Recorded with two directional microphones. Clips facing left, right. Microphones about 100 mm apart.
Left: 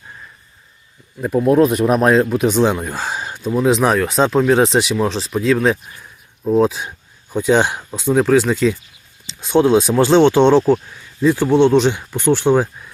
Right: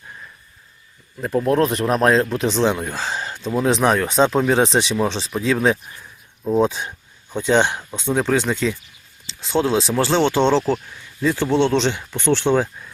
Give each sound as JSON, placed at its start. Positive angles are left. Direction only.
{"t": 1.2, "sound": "speech", "side_deg": 10}
{"t": 9.2, "sound": "speech", "side_deg": 20}